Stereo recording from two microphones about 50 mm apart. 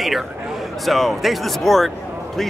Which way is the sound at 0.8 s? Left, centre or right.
Centre.